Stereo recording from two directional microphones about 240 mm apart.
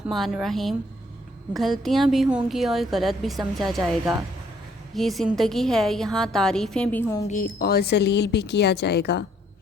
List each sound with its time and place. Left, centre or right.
0.1 s a woman's voice: centre
7.3 s speech: left